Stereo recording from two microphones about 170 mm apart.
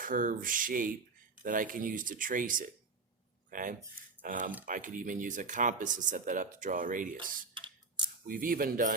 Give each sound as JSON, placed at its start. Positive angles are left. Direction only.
{"t": 0.0, "sound": "speech", "side_deg": -55}
{"t": 7.5, "sound": "a sound", "side_deg": -30}
{"t": 8.3, "sound": "speech", "side_deg": -55}